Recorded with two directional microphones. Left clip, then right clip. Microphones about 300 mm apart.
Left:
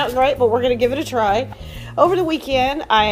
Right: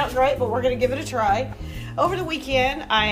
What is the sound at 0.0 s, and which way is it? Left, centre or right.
A woman's voice, left.